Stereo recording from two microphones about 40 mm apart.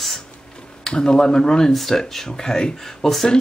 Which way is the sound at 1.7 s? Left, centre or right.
Centre.